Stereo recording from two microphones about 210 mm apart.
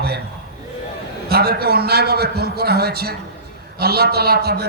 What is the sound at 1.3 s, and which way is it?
A man's voice, 50° right (ahead or behind).